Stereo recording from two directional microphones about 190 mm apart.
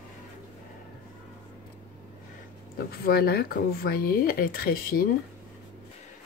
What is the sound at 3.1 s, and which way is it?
Speech, 55° left (ahead or behind).